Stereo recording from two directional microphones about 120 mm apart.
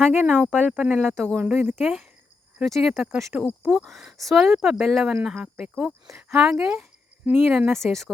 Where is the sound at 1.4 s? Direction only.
15° right (ahead or behind).